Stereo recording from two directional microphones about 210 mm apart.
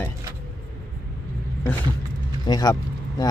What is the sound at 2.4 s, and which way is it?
Speech, 20° left (ahead or behind).